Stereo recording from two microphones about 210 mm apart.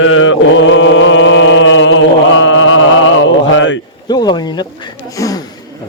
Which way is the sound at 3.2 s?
60° left (ahead or behind).